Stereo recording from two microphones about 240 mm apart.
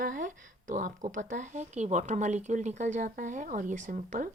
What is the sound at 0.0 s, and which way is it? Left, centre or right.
Speech, right.